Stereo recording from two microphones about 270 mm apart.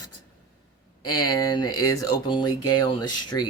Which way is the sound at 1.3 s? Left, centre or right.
Centre.